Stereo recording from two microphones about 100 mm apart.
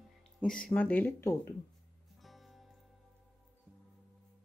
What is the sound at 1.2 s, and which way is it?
Speech, 30° left (ahead or behind).